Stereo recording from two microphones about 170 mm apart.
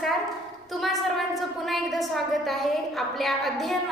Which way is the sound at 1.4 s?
Centre (ahead or behind).